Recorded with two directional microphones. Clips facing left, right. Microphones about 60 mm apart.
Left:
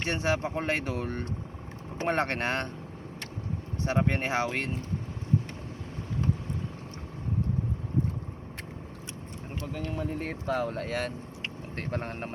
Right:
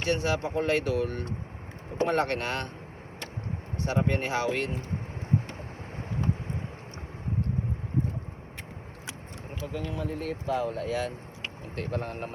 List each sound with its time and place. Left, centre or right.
0.0 s speech: left
3.8 s speech: left
9.9 s speech: left
10.4 s speech: left
11.8 s speech: left